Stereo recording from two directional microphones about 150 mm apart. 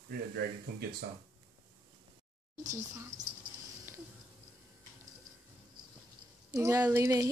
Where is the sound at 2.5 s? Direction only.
55° right (ahead or behind).